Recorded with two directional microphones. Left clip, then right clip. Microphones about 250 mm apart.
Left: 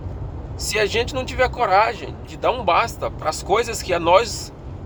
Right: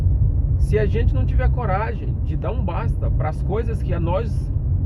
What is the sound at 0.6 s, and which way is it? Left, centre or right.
Speech, left.